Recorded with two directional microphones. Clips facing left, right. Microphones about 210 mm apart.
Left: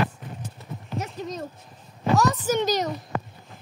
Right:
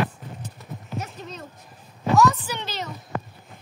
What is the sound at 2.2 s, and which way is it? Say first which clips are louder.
Speech: right 2 dB; 45° left (ahead or behind).